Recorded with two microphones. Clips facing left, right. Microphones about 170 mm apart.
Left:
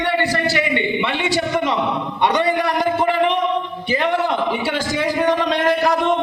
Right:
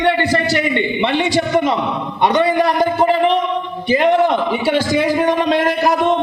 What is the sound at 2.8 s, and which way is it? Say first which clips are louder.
Speech: right 3 dB; 35° right (ahead or behind).